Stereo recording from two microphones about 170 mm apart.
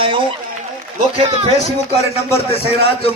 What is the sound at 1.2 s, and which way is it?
Speech, 35° right (ahead or behind).